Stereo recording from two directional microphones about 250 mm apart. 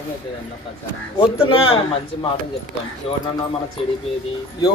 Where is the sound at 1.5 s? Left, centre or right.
Left.